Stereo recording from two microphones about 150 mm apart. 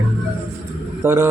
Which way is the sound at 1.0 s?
15° right (ahead or behind).